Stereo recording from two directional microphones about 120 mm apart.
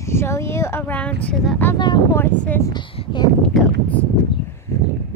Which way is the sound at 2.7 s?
45° left (ahead or behind).